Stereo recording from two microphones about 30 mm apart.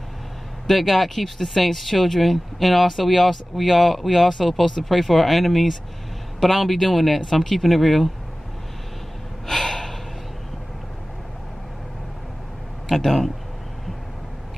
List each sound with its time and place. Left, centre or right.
0.7 s speech: centre
9.5 s gasp: centre
12.8 s speech: centre